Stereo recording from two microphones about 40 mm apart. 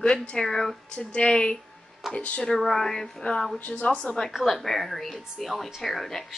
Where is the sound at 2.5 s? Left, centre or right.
Centre; by 4.0 s left.